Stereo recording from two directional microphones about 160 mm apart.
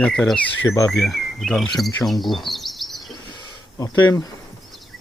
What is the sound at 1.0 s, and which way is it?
Insect, centre (ahead or behind).